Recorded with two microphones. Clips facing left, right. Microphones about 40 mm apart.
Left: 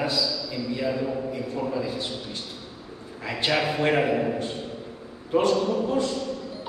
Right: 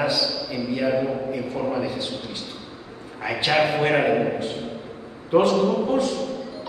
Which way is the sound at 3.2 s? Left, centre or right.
Centre.